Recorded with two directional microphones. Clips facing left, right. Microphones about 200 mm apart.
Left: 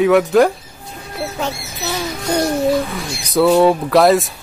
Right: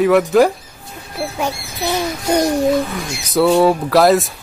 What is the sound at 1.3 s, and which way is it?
Speech, 10° right (ahead or behind).